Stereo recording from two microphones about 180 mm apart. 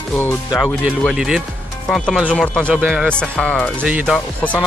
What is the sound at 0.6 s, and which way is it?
Speech, centre (ahead or behind).